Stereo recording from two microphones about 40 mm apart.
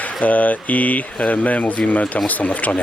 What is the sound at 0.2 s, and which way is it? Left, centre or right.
Speech, left.